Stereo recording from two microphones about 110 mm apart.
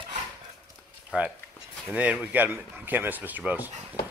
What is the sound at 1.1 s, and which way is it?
A man's voice, 10° right (ahead or behind).